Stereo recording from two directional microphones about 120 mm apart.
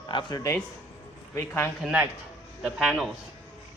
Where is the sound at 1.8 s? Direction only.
5° right (ahead or behind).